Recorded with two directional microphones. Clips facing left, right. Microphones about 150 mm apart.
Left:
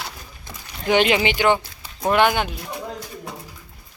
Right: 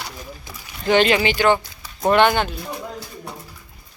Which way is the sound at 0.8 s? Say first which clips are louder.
Right 1 dB; 15° left (ahead or behind).